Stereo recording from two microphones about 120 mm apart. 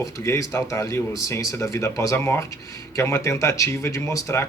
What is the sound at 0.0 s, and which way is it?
A man's voice, 25° left (ahead or behind).